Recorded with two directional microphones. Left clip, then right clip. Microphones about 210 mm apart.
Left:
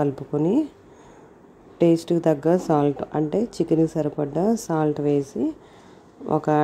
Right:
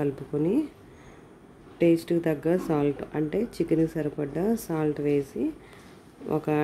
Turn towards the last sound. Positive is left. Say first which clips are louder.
# left 6 dB
turn(degrees=25)  # may be behind; listen again after turning